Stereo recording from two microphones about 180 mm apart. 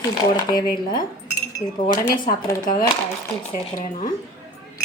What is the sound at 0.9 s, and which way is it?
Cutlery, 20° left (ahead or behind).